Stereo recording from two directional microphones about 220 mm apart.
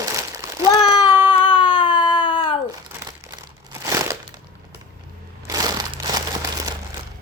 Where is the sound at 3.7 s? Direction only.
15° right (ahead or behind).